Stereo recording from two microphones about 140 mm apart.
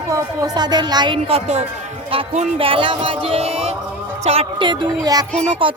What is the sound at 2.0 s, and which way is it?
Speech, 50° right (ahead or behind).